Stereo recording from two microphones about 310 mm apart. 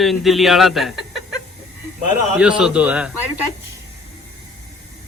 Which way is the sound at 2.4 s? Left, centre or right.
Centre.